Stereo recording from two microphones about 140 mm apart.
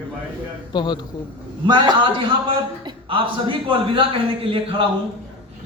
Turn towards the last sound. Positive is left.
turn(degrees=-40)  # may be behind; listen again after turning